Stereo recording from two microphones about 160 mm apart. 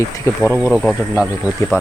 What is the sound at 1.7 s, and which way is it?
Speech, 15° left (ahead or behind).